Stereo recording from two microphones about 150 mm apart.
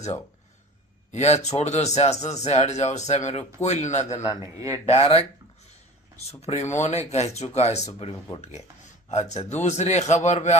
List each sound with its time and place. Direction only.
1.1 s speech: 50° left (ahead or behind)
4.5 s speech: 20° right (ahead or behind)
4.9 s speech: 40° left (ahead or behind)
6.4 s speech: 50° left (ahead or behind)